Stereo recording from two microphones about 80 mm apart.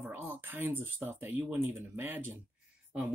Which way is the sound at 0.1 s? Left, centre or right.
Right.